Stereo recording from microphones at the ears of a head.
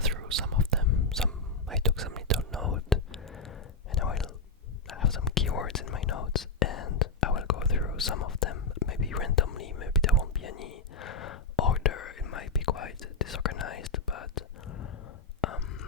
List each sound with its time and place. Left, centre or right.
0.0 s whispering: right
2.0 s whispering: right
3.9 s a sound: left
4.9 s whispering: left